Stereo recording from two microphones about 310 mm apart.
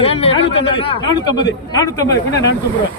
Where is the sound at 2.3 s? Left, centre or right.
Left.